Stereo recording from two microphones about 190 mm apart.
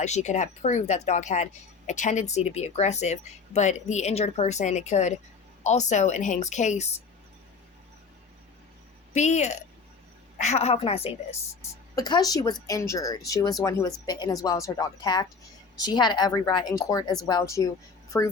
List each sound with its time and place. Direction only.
0.0 s speech: 40° left (ahead or behind)
9.1 s speech: 35° left (ahead or behind)
11.9 s speech: 20° left (ahead or behind)